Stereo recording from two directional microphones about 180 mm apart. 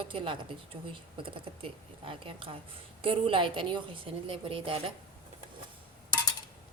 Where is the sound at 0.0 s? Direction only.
30° right (ahead or behind).